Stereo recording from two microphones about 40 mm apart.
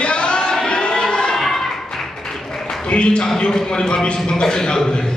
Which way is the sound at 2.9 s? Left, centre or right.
Left.